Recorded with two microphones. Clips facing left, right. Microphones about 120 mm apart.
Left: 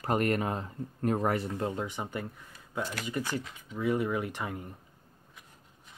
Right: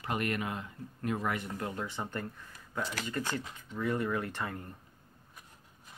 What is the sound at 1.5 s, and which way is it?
Speech, 25° left (ahead or behind).